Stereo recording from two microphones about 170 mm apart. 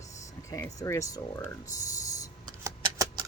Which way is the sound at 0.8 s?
20° left (ahead or behind).